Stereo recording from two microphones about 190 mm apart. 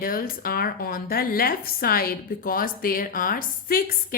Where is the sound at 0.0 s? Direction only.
50° left (ahead or behind).